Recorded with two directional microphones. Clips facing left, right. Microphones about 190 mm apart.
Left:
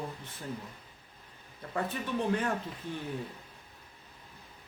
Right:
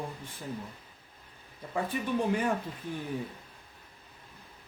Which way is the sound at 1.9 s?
10° right (ahead or behind).